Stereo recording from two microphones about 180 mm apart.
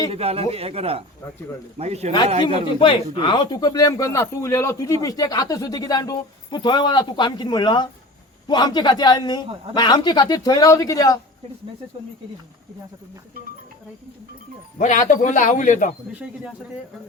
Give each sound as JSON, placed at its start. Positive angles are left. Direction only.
{"t": 0.1, "sound": "speech", "side_deg": -35}
{"t": 2.7, "sound": "speech", "side_deg": 25}
{"t": 14.8, "sound": "a man's voice", "side_deg": 45}